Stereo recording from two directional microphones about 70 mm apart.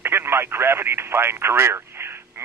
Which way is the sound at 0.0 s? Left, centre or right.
Right.